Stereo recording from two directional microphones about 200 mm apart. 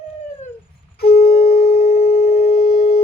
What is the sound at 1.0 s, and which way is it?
Busy signal, 50° left (ahead or behind).